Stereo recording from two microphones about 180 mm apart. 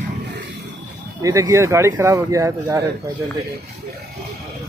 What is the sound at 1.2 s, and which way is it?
A man's voice, 15° right (ahead or behind).